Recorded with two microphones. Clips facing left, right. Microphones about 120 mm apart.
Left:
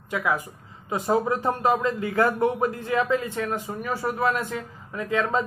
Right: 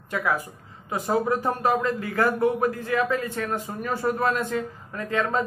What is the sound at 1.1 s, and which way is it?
A man's voice, 20° left (ahead or behind).